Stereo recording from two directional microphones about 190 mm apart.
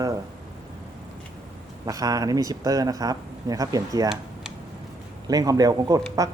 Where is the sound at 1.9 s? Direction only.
20° right (ahead or behind).